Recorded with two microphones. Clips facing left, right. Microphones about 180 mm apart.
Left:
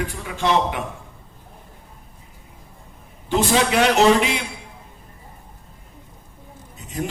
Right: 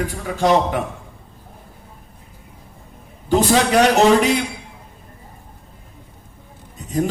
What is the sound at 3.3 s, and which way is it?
A man's voice, 40° right (ahead or behind).